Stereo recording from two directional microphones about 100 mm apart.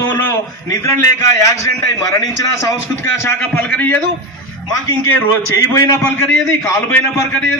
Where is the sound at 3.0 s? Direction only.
25° left (ahead or behind).